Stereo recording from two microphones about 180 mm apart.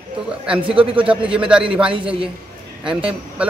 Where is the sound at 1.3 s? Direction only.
5° right (ahead or behind).